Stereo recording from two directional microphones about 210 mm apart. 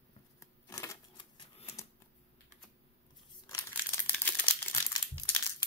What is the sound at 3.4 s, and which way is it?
Crumpling, 10° left (ahead or behind).